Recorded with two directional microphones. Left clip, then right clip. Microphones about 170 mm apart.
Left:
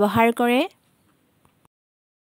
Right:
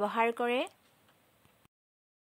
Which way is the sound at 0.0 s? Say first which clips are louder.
Left 11 dB; 65° left (ahead or behind).